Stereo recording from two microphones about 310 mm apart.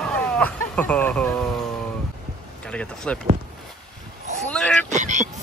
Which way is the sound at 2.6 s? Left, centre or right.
Centre.